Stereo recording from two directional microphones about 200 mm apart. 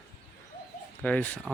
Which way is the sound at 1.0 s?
5° left (ahead or behind).